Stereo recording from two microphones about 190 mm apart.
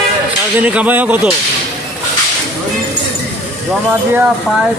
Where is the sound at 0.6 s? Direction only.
5° right (ahead or behind).